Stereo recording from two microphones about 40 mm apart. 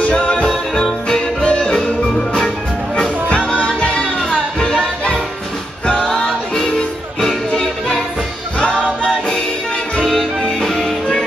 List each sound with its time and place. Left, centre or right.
0.1 s music: left
3.3 s music: left
5.9 s music: left
6.2 s music: centre
6.7 s music: centre
8.5 s music: left
9.9 s music: centre